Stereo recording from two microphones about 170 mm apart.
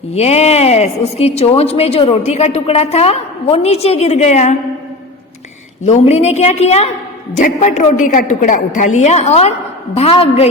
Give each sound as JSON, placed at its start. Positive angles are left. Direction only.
{"t": 0.1, "sound": "a woman's voice", "side_deg": 40}
{"t": 5.8, "sound": "a woman's voice", "side_deg": 40}